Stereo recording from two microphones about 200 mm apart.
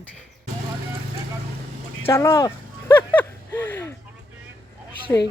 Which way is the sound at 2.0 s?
15° left (ahead or behind).